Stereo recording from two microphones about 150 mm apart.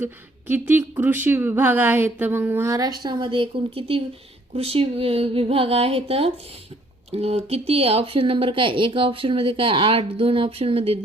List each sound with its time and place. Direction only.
0.0 s speech: 15° right (ahead or behind); by 11.0 s 40° right (ahead or behind)